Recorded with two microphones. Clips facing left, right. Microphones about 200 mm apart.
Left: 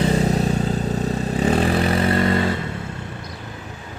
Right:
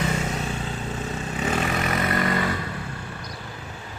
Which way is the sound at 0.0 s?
35° left (ahead or behind).